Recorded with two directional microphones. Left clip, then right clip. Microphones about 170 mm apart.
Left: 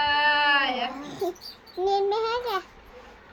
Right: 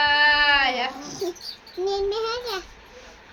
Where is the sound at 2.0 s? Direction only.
25° right (ahead or behind).